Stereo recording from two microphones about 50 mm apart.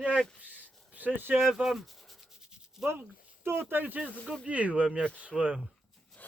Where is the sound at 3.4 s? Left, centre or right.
Right.